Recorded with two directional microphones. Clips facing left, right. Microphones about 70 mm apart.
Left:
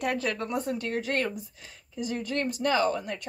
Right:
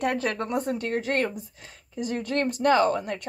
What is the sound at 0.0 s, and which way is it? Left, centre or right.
Speech, right.